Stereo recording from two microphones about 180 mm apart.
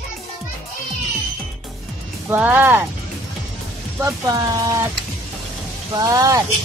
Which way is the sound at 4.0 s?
20° right (ahead or behind).